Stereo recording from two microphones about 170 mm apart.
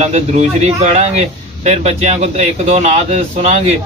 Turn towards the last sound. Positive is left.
turn(degrees=-40)  # may be behind; listen again after turning